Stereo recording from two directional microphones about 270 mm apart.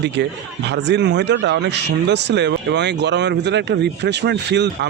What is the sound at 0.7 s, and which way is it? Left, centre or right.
Speech, right.